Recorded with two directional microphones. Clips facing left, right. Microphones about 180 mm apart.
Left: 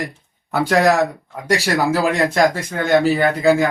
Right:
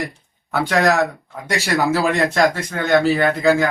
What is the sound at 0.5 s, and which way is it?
Speech, 10° left (ahead or behind).